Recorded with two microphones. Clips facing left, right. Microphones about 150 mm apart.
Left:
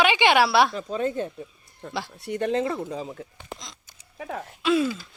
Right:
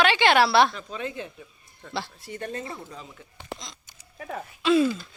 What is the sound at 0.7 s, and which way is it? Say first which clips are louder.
Speech: left 7 dB; 40° left (ahead or behind).